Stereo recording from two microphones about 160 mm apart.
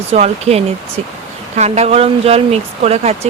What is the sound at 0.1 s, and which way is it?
Speech, 40° right (ahead or behind).